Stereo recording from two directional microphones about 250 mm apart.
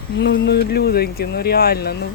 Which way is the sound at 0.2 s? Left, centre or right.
Left.